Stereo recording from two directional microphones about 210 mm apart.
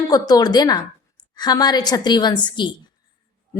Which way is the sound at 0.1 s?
20° left (ahead or behind).